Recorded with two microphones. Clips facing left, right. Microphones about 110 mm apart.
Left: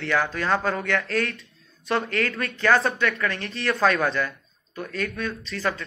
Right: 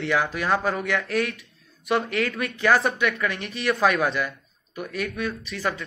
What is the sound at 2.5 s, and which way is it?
Speech, 10° right (ahead or behind).